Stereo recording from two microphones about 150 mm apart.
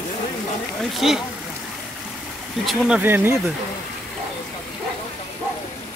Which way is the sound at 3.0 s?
15° right (ahead or behind).